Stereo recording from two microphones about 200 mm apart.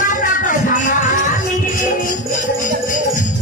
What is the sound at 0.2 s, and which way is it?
Music, 40° left (ahead or behind).